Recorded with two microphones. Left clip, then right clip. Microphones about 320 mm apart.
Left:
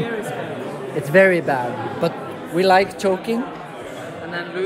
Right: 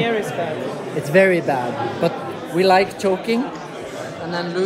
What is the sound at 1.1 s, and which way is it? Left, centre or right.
A man's voice, centre.